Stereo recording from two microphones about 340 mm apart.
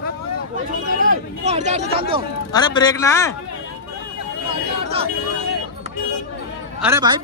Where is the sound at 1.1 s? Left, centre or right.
Right.